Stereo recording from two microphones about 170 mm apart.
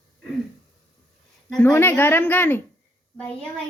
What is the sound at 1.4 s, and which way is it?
A woman's voice, 10° left (ahead or behind).